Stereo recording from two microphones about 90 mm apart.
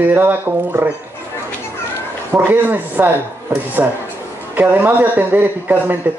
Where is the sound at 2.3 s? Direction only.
20° right (ahead or behind).